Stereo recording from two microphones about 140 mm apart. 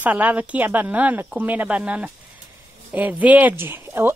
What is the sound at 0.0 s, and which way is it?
Speech, 10° right (ahead or behind).